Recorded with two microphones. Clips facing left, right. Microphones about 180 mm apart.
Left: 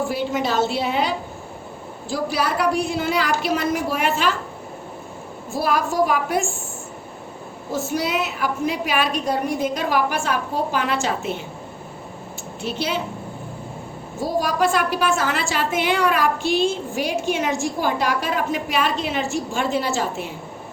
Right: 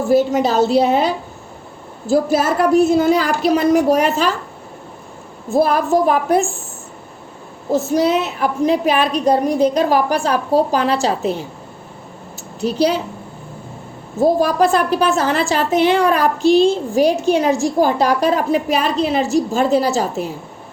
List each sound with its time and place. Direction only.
0.1 s a child's voice: 40° right (ahead or behind)
2.4 s a child's voice: 45° right (ahead or behind)
5.6 s a child's voice: 40° right (ahead or behind)
7.9 s a child's voice: 40° right (ahead or behind)
12.5 s a woman's voice: 40° right (ahead or behind)
14.4 s a child's voice: 40° right (ahead or behind)